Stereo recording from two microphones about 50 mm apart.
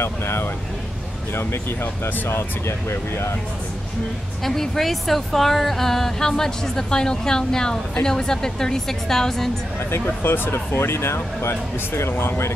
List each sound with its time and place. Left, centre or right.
0.0 s speech: left
2.9 s speech: left
4.5 s speech: centre
9.8 s speech: left